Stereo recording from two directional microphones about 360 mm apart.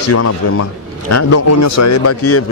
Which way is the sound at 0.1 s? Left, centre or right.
Left.